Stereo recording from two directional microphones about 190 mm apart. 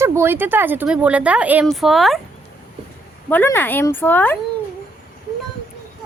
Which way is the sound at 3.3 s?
10° left (ahead or behind).